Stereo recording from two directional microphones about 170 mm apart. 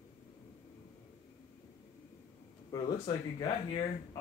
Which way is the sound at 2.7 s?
25° left (ahead or behind).